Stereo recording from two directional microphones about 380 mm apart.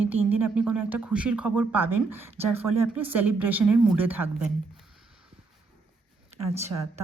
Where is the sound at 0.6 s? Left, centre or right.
Centre.